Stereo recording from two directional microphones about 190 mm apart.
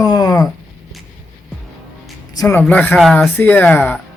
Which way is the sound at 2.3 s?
15° left (ahead or behind).